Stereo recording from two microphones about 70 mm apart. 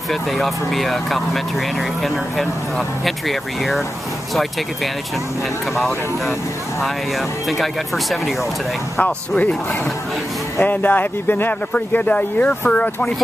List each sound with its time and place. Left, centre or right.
0.1 s speech: centre
3.1 s speech: centre
5.8 s speech: centre
7.4 s speech: centre
10.6 s speech: left